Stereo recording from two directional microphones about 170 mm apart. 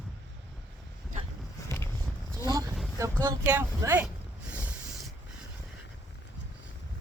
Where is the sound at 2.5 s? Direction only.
20° right (ahead or behind); by 5.1 s 5° right (ahead or behind).